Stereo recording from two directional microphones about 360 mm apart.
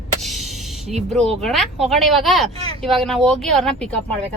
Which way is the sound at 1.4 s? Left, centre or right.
Centre.